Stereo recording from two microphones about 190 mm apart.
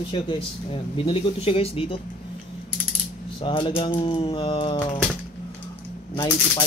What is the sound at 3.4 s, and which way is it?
Speech, 25° left (ahead or behind).